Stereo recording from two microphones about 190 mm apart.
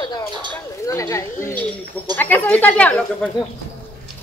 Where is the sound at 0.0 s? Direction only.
20° left (ahead or behind).